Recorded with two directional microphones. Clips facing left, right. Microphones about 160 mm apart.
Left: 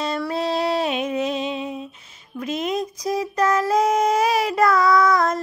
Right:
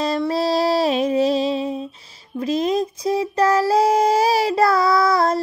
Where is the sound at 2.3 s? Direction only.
35° right (ahead or behind).